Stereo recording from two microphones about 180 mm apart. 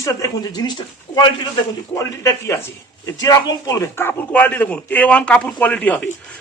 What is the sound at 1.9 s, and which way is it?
A man's voice, 15° left (ahead or behind).